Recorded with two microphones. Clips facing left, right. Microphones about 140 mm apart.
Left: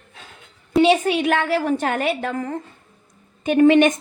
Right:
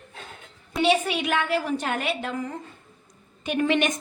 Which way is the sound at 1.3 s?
60° left (ahead or behind).